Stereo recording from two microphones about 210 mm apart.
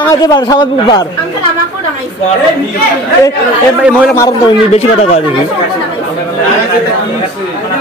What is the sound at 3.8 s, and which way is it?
Speech, 5° right (ahead or behind).